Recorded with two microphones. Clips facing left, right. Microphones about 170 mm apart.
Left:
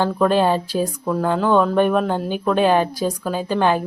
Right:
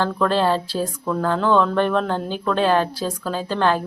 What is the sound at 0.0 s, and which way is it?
Speech, 15° left (ahead or behind).